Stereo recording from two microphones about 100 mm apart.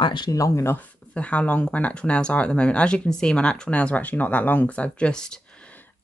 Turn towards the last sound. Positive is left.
turn(degrees=10)  # may be behind; listen again after turning